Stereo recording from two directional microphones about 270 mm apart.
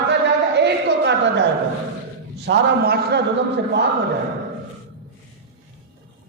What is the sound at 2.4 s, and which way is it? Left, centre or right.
A man's voice, right.